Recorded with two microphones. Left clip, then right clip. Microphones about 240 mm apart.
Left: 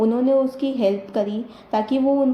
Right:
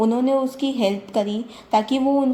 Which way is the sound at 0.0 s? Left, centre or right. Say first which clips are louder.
Left 1 dB; right.